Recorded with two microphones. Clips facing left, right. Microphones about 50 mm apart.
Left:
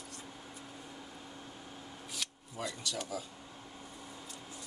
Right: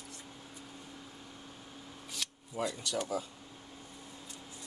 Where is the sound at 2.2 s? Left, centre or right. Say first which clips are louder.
Right 1 dB; centre.